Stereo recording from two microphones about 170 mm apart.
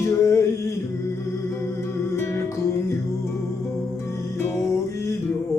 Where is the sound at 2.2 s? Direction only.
15° left (ahead or behind).